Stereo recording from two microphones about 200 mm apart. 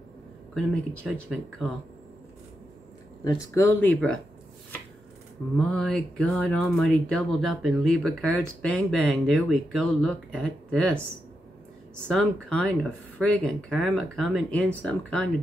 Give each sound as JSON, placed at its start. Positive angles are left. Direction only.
{"t": 0.6, "sound": "speech", "side_deg": 5}
{"t": 3.3, "sound": "speech", "side_deg": 10}
{"t": 5.6, "sound": "speech", "side_deg": 5}
{"t": 12.1, "sound": "speech", "side_deg": 5}